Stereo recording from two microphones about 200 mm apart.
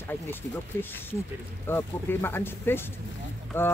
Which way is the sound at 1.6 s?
10° left (ahead or behind).